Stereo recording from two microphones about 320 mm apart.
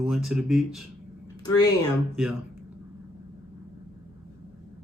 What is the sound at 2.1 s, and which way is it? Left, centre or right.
Speech, centre.